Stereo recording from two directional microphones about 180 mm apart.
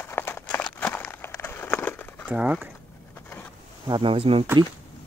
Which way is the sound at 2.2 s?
5° right (ahead or behind).